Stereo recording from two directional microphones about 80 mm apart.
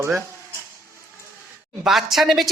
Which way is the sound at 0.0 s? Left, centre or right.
Right.